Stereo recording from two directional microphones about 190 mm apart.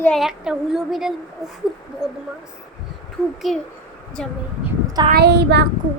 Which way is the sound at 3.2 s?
5° left (ahead or behind).